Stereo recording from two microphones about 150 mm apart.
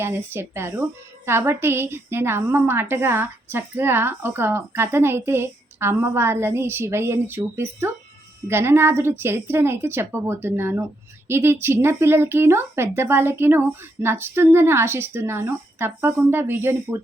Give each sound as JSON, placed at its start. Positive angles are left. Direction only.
{"t": 0.0, "sound": "a woman's voice", "side_deg": -15}